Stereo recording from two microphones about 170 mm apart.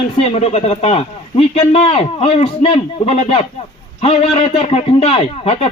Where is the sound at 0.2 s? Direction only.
40° left (ahead or behind).